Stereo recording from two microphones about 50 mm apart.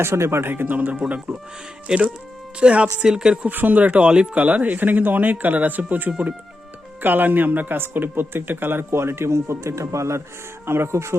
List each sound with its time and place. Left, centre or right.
0.0 s speech: right
0.4 s speech: right
1.9 s speech: centre
3.5 s speech: right
10.7 s speech: right